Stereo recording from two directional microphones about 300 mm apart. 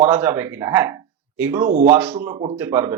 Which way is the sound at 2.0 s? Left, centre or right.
Centre.